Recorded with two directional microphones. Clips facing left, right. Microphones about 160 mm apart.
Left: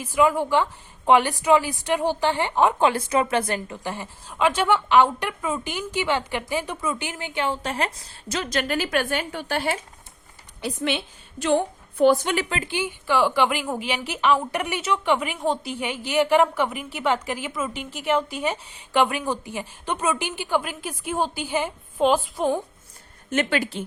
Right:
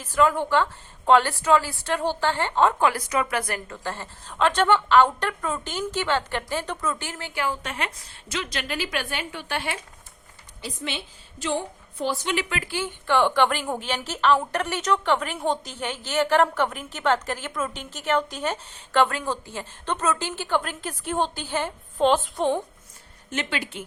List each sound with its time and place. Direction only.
0.0 s a woman's voice: 10° left (ahead or behind)
3.8 s a woman's voice: 15° left (ahead or behind); by 9.8 s 40° left (ahead or behind)
10.6 s a woman's voice: 60° left (ahead or behind)
12.5 s a woman's voice: 25° left (ahead or behind)
13.1 s a woman's voice: 5° left (ahead or behind)
23.3 s speech: 50° left (ahead or behind)